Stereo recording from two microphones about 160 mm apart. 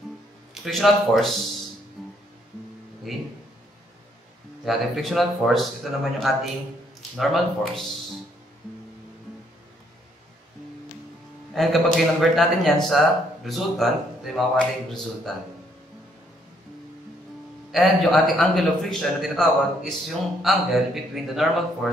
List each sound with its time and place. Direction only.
0.6 s a man's voice: centre (ahead or behind)
2.0 s music: centre (ahead or behind)
3.1 s a man's voice: centre (ahead or behind)
4.6 s a man's voice: centre (ahead or behind)
11.5 s a man's voice: centre (ahead or behind)
17.6 s a man's voice: centre (ahead or behind)